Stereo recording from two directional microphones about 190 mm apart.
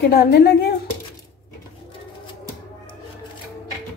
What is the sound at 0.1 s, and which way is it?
Speech, 55° left (ahead or behind).